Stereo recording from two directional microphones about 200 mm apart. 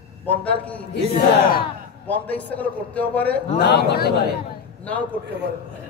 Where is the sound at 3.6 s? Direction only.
55° left (ahead or behind).